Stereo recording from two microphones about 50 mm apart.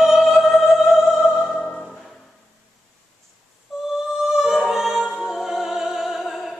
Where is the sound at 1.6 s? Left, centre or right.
Left.